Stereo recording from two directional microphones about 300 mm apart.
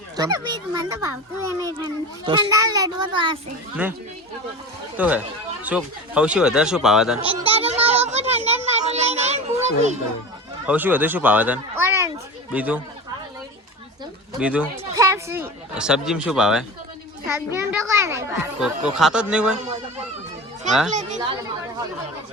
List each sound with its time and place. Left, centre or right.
0.2 s a child's voice: centre
3.8 s a man's voice: centre
4.9 s a man's voice: centre
7.3 s a sound: centre
10.7 s a man's voice: centre
14.3 s a man's voice: centre
20.9 s speech: right